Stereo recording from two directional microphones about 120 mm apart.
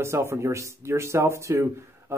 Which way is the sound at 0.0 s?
20° right (ahead or behind).